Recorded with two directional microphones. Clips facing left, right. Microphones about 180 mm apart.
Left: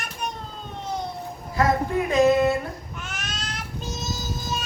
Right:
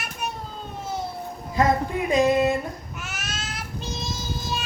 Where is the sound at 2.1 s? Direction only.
15° right (ahead or behind).